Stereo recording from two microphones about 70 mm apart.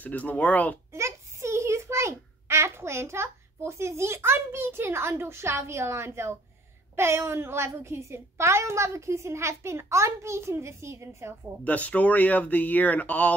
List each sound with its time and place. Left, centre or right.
0.0 s speech: left
0.9 s a child's voice: right
11.6 s speech: left